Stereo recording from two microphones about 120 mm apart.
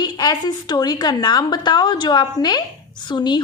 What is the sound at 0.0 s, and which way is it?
A woman's voice, 35° left (ahead or behind).